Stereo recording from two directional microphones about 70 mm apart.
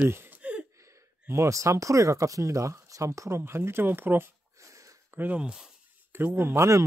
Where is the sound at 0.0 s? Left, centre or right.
Right.